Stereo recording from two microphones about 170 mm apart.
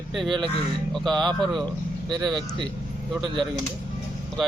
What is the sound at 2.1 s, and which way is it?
Speech, 25° right (ahead or behind).